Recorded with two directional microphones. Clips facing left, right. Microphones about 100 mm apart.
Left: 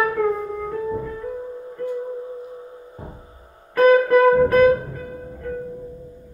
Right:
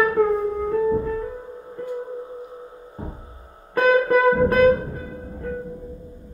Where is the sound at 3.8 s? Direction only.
10° right (ahead or behind).